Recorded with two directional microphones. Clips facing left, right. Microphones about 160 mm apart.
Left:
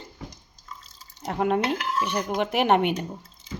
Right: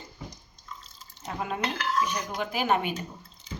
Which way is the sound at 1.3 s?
65° left (ahead or behind).